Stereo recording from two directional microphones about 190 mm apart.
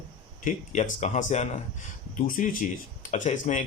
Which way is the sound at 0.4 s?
40° left (ahead or behind).